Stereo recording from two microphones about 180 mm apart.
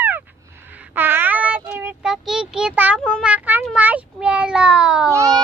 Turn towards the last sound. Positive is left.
turn(degrees=-20)  # may be behind; listen again after turning